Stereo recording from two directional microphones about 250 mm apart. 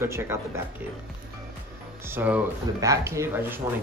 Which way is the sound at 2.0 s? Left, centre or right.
Centre.